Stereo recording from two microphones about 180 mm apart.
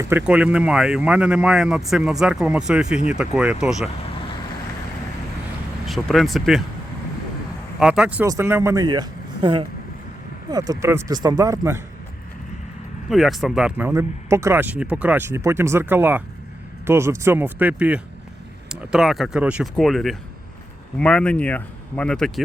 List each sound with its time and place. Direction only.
0.0 s speech: 10° right (ahead or behind)
5.8 s speech: centre (ahead or behind)
7.8 s speech: 5° right (ahead or behind)
13.1 s speech: centre (ahead or behind)